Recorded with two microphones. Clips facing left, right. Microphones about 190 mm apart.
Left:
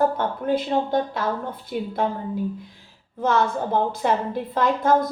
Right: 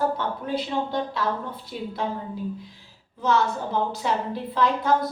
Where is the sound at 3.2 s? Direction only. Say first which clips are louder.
Left 2 dB; 55° left (ahead or behind).